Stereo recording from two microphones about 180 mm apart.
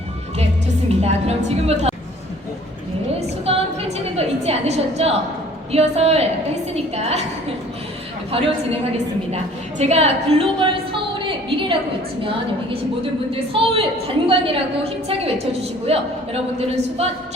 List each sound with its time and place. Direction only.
0.9 s a woman's voice: 35° right (ahead or behind)
3.2 s a woman's voice: 35° right (ahead or behind)
9.3 s a woman's voice: 35° right (ahead or behind)
13.3 s a man's voice: 30° right (ahead or behind)